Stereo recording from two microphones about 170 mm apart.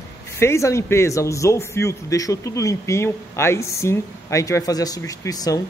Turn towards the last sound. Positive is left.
turn(degrees=20)  # may be behind; listen again after turning